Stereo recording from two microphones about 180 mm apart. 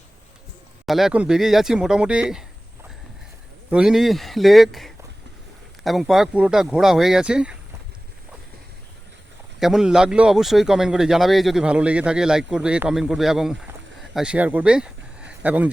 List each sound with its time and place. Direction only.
0.9 s speech: centre (ahead or behind)
3.7 s speech: 5° right (ahead or behind)
9.6 s speech: centre (ahead or behind)